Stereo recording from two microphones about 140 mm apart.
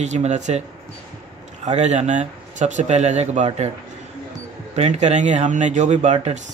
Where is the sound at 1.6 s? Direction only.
55° right (ahead or behind).